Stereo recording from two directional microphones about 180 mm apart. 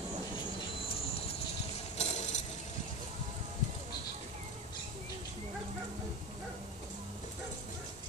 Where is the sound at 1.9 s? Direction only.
40° left (ahead or behind).